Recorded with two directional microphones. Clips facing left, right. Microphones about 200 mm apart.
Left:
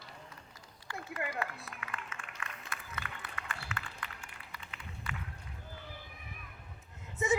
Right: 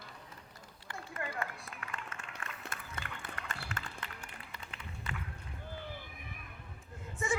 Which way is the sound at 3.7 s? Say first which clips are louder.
Even; 40° right (ahead or behind).